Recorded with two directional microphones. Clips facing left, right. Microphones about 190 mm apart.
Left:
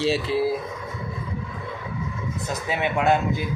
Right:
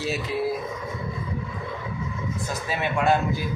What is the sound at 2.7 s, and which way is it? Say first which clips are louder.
Speech: left 1 dB; 20° left (ahead or behind).